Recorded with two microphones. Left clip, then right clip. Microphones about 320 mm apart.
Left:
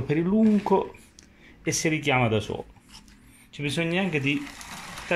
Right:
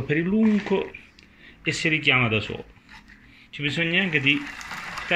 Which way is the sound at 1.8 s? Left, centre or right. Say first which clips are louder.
Right 4 dB; centre.